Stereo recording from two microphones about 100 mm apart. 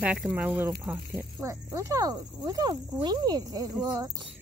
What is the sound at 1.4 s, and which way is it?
Speech, 30° right (ahead or behind).